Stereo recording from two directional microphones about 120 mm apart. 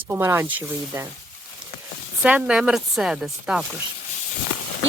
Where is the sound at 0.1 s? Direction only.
20° right (ahead or behind).